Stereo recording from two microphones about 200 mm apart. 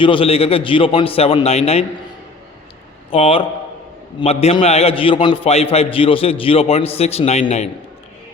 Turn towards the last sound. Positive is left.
turn(degrees=35)  # may be behind; listen again after turning